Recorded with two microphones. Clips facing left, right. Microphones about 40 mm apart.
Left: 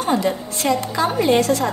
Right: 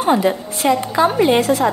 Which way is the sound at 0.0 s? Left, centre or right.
Centre.